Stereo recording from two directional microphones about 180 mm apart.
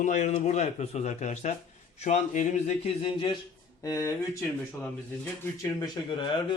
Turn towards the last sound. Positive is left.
turn(degrees=25)  # may be behind; listen again after turning